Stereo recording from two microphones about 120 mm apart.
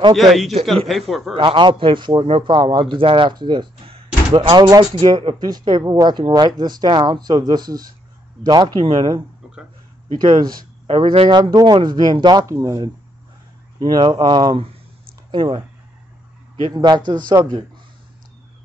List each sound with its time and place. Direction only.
0.1 s a man's voice: centre (ahead or behind)
1.3 s a man's voice: 45° right (ahead or behind)
10.1 s a man's voice: 40° right (ahead or behind)
16.7 s a man's voice: 35° right (ahead or behind)
17.3 s speech: 50° right (ahead or behind)